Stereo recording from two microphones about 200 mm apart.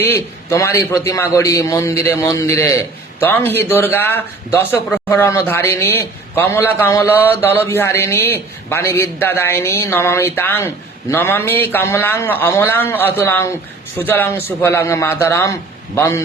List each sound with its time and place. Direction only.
0.0 s a man's voice: 15° left (ahead or behind)